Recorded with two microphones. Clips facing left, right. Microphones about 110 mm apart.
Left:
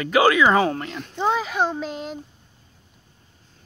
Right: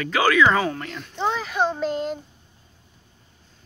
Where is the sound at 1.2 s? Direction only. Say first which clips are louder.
Left 1 dB; 10° left (ahead or behind).